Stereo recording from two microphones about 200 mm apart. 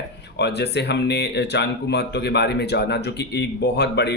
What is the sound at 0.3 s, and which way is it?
A man's voice, 55° left (ahead or behind).